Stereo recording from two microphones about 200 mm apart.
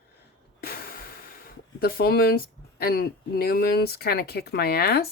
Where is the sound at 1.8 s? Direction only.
50° left (ahead or behind).